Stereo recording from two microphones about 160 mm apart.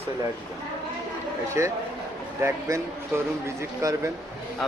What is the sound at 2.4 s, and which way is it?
A man's voice, 15° right (ahead or behind).